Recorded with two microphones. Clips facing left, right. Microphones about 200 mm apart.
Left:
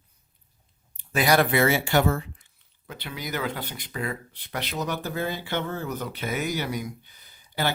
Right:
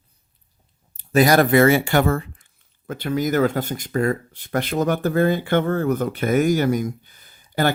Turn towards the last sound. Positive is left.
turn(degrees=-50)  # may be behind; listen again after turning